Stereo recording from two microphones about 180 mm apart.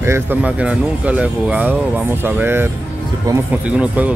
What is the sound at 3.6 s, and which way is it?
Speech, 5° right (ahead or behind).